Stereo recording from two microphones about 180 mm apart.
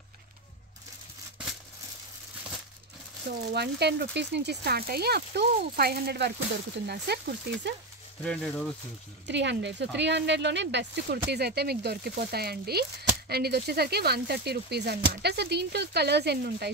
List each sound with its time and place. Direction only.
3.3 s speech: 65° right (ahead or behind)
8.2 s speech: 5° left (ahead or behind)
9.3 s speech: 75° right (ahead or behind)